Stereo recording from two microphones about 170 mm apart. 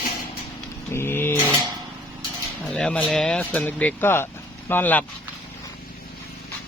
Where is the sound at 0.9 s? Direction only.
15° left (ahead or behind).